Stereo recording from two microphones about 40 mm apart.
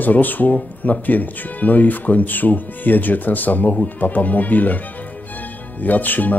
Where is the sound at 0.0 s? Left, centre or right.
Left.